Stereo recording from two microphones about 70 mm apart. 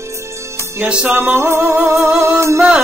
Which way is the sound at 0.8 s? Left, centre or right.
Centre.